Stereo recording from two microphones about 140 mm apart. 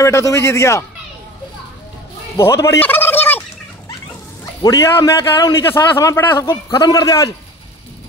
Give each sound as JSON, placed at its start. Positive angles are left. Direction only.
{"t": 0.0, "sound": "a man's voice", "side_deg": 20}
{"t": 2.3, "sound": "gobble", "side_deg": 20}
{"t": 4.6, "sound": "a man's voice", "side_deg": 25}
{"t": 6.7, "sound": "a man's voice", "side_deg": 25}